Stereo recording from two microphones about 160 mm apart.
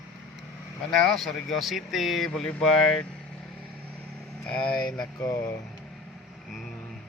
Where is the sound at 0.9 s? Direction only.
Centre (ahead or behind).